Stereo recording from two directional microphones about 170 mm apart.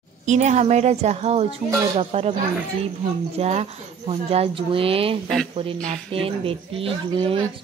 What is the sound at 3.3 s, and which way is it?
Speech, 40° right (ahead or behind).